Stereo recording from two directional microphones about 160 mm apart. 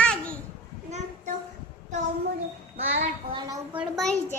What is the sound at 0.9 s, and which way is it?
Child singing, 45° right (ahead or behind).